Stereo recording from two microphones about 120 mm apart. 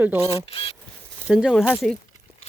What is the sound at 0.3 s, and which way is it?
Speech, 50° left (ahead or behind).